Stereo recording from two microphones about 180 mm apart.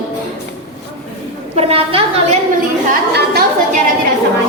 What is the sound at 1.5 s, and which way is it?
Speech, 35° right (ahead or behind).